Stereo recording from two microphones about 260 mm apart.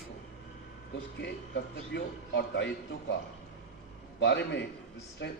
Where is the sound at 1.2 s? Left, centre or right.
Left.